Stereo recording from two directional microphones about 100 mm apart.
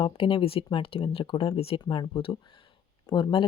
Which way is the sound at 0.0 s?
70° left (ahead or behind).